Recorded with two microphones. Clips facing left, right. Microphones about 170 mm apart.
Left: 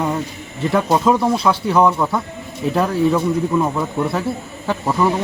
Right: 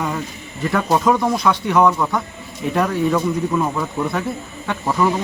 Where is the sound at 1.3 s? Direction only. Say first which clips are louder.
Left 1 dB; 30° left (ahead or behind).